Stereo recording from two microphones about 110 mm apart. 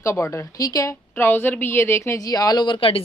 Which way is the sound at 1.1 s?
20° left (ahead or behind).